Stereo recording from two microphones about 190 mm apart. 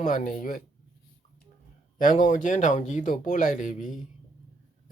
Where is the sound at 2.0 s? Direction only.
45° left (ahead or behind).